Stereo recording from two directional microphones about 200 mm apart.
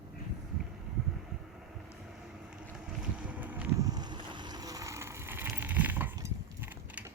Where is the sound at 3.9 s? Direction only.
20° right (ahead or behind).